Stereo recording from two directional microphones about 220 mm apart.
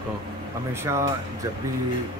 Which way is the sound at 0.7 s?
10° right (ahead or behind).